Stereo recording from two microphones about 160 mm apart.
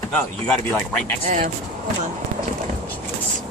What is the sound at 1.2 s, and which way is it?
Speech, 55° right (ahead or behind).